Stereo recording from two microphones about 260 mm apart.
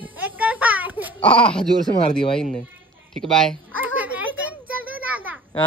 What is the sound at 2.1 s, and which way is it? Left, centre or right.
Speech, centre.